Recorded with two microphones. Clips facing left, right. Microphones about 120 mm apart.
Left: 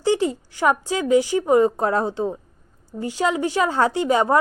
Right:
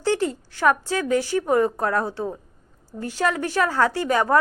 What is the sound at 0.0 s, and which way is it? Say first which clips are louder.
A woman's voice: left 2 dB; 15° left (ahead or behind).